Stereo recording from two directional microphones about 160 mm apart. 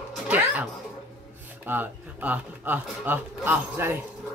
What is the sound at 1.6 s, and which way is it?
Speech, 10° right (ahead or behind).